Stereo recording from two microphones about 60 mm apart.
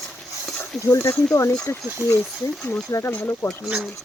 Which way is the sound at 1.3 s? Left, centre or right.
Left.